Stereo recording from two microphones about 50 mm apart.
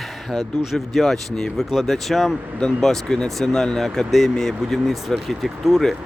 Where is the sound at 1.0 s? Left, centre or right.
Centre.